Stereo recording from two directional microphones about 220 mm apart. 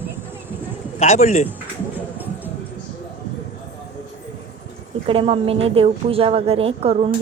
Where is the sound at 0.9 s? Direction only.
30° left (ahead or behind).